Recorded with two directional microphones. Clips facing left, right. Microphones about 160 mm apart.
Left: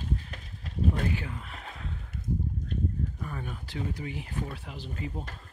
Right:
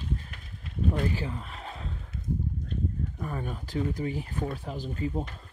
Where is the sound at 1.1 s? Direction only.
35° right (ahead or behind).